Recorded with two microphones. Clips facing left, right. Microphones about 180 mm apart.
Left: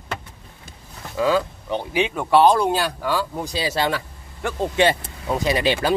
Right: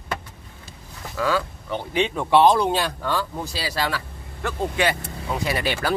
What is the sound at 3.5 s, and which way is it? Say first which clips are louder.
Speech: left 4 dB; 25° left (ahead or behind).